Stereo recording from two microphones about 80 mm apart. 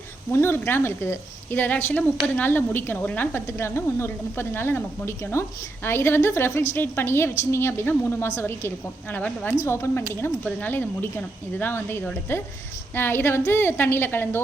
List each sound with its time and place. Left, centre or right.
0.3 s a woman's voice: left
9.6 s a woman's voice: left